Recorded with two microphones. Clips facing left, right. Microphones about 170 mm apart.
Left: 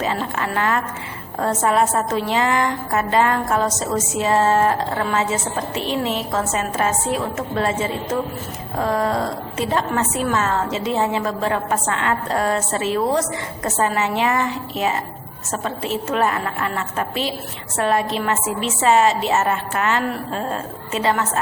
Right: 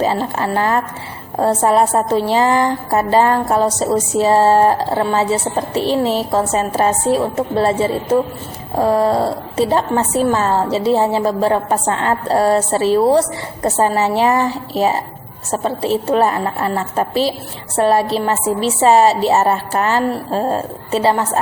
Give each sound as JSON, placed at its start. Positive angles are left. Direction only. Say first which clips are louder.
{"t": 0.0, "sound": "a woman's voice", "louder": "right 6 dB", "side_deg": -35}